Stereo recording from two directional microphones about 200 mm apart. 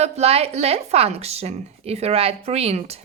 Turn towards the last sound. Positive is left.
turn(degrees=-30)  # may be behind; listen again after turning